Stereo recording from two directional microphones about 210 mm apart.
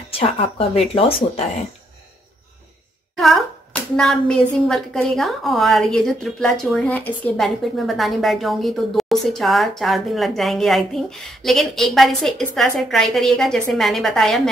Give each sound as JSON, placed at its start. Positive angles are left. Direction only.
{"t": 0.1, "sound": "speech", "side_deg": 25}
{"t": 3.2, "sound": "speech", "side_deg": 0}